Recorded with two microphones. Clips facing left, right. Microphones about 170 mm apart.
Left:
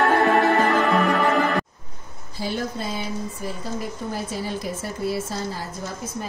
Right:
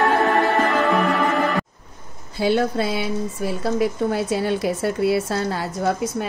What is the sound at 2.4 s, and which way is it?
A woman's voice, 70° right (ahead or behind).